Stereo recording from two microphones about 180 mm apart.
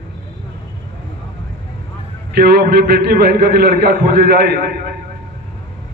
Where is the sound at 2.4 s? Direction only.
65° right (ahead or behind).